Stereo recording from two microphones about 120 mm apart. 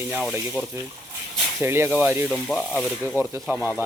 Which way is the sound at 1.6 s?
20° right (ahead or behind).